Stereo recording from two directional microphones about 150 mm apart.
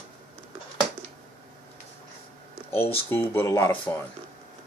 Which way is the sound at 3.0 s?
15° left (ahead or behind).